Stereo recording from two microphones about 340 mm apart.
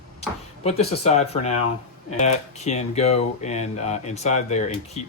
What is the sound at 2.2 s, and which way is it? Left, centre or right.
Speech, centre.